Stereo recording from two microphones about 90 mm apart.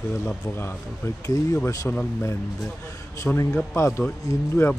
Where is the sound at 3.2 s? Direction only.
35° left (ahead or behind).